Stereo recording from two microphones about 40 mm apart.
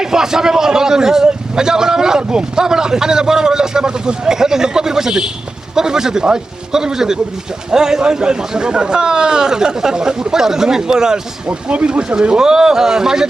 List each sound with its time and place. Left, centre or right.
0.0 s a man's voice: centre
11.4 s a man's voice: right; by 13.2 s centre